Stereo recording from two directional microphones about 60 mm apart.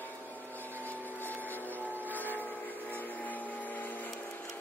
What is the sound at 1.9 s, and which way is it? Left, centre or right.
Vehicle, left.